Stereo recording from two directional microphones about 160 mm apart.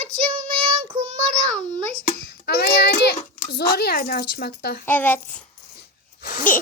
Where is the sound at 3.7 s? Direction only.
80° left.